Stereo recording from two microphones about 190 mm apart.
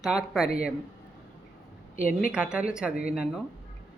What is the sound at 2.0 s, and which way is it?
Speech, 45° left (ahead or behind).